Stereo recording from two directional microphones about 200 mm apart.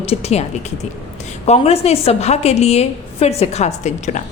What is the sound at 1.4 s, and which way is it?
A woman's voice, 30° left (ahead or behind).